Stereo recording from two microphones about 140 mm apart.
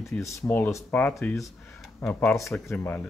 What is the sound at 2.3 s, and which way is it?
Speech, 20° left (ahead or behind).